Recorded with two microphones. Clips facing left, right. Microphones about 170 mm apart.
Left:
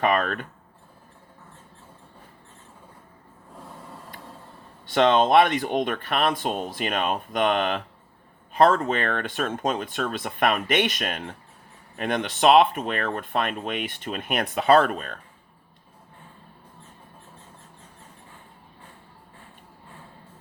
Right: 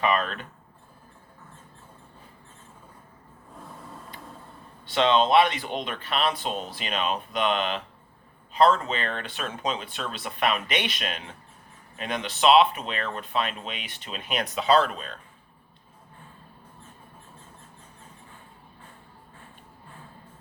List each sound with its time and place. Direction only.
0.0 s speech: 50° left (ahead or behind)
4.9 s speech: 50° left (ahead or behind)